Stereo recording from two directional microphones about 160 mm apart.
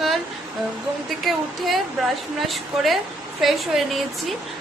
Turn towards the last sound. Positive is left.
turn(degrees=0)  # may be behind; listen again after turning